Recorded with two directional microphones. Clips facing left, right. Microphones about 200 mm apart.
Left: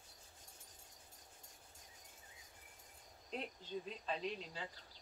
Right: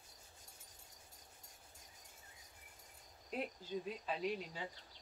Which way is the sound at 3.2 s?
5° right (ahead or behind).